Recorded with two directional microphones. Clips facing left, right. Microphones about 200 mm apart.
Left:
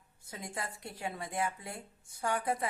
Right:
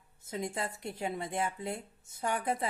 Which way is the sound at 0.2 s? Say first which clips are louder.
Right 6 dB; 25° right (ahead or behind).